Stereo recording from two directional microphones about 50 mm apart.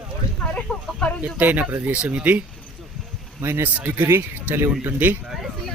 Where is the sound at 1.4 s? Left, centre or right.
Right.